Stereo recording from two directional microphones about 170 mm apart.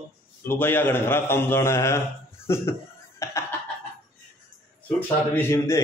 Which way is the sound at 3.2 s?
15° left (ahead or behind).